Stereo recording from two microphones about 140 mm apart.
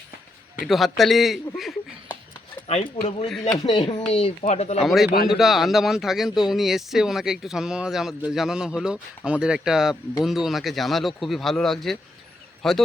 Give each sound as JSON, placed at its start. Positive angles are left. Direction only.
{"t": 0.6, "sound": "speech", "side_deg": 0}
{"t": 2.6, "sound": "speech", "side_deg": 45}
{"t": 3.7, "sound": "speech", "side_deg": 35}
{"t": 4.1, "sound": "speech", "side_deg": 45}
{"t": 4.8, "sound": "speech", "side_deg": 0}